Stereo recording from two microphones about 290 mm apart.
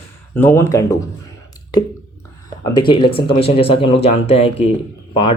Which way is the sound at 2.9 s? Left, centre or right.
Centre.